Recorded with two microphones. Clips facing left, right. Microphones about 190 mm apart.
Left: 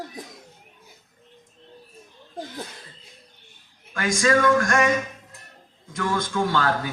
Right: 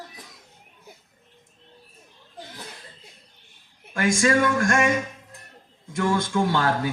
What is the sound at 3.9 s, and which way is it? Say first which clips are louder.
Speech: even; 25° right (ahead or behind).